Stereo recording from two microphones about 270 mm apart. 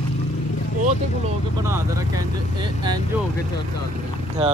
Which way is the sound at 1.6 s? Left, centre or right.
Centre.